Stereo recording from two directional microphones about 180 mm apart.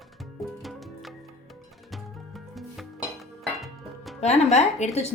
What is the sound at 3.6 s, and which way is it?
Music, centre (ahead or behind).